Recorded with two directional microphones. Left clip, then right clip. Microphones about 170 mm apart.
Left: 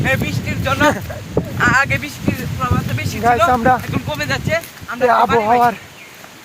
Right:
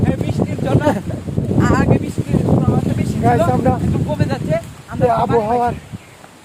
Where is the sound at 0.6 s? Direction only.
20° right (ahead or behind).